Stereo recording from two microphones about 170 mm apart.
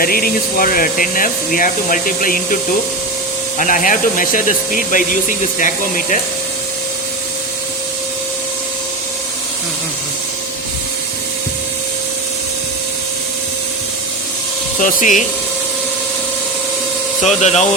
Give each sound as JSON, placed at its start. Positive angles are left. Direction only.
{"t": 0.0, "sound": "speech", "side_deg": 60}
{"t": 14.8, "sound": "speech", "side_deg": 50}
{"t": 17.2, "sound": "speech", "side_deg": 40}